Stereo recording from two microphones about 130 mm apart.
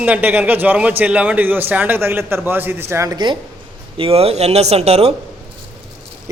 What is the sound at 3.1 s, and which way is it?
Speech, 35° right (ahead or behind).